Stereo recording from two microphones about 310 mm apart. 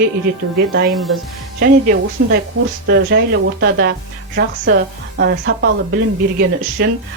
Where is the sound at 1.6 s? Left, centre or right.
Right.